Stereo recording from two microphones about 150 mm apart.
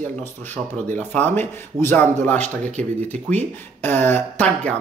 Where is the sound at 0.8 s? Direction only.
10° left (ahead or behind).